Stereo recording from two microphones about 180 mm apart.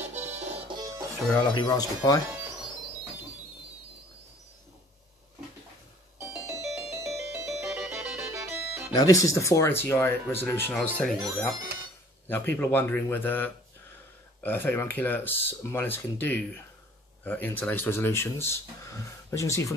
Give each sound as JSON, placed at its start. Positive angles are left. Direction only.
{"t": 0.0, "sound": "music", "side_deg": -35}
{"t": 0.7, "sound": "music", "side_deg": -20}
{"t": 1.5, "sound": "speech", "side_deg": 25}
{"t": 6.4, "sound": "music", "side_deg": -15}
{"t": 8.9, "sound": "speech", "side_deg": 20}